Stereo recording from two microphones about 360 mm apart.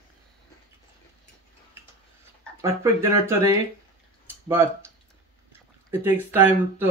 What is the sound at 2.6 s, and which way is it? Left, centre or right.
Speech, centre.